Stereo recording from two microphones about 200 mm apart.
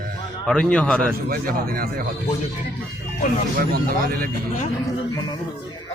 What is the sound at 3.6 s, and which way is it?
Speech, 45° right (ahead or behind).